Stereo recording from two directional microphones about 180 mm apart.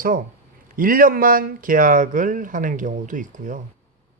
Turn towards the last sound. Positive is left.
turn(degrees=-45)  # may be behind; listen again after turning